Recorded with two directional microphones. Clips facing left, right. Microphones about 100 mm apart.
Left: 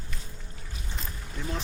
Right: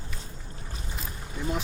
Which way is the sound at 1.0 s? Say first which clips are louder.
Right 3 dB; 10° right (ahead or behind).